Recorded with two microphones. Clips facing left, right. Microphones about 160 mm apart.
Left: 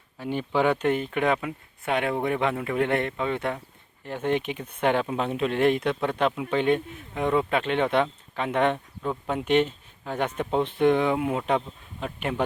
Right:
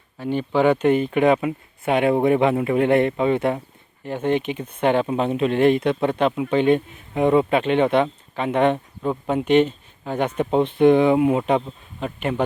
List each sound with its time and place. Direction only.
0.2 s speech: 5° left (ahead or behind); by 3.6 s 15° right (ahead or behind)
4.0 s speech: centre (ahead or behind)